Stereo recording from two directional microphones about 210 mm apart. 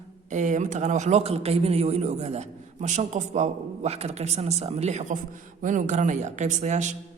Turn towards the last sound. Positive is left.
turn(degrees=-35)  # may be behind; listen again after turning